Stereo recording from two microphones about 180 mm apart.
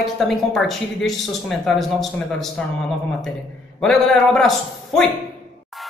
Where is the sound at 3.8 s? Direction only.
5° left (ahead or behind).